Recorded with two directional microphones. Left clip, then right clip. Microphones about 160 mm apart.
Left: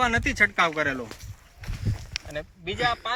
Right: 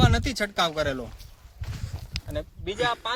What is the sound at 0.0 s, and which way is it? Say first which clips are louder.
Speech: left 4 dB; 90° right.